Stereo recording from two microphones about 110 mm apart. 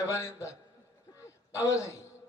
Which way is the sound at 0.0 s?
25° left (ahead or behind).